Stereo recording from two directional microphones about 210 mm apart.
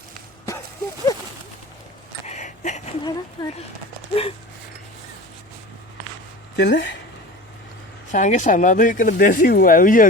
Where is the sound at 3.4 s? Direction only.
20° left (ahead or behind).